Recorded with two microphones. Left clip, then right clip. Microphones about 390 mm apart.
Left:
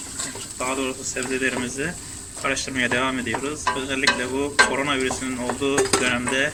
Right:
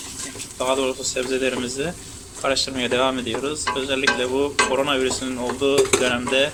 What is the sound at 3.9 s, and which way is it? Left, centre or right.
Stir, centre.